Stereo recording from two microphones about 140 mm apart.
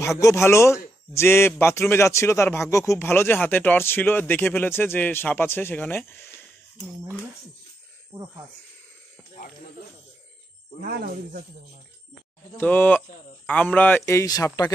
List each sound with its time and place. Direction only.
0.0 s speech: 20° left (ahead or behind)
8.1 s speech: 25° right (ahead or behind)
10.8 s speech: 90° right
12.5 s speech: 15° left (ahead or behind)